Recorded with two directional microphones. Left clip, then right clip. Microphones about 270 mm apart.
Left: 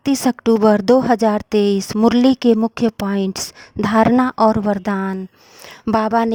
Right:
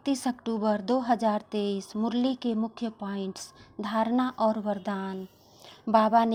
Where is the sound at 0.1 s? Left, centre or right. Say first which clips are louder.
Left 12 dB; left.